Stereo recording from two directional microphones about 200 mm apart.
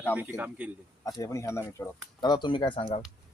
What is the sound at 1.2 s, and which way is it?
Speech, 15° left (ahead or behind).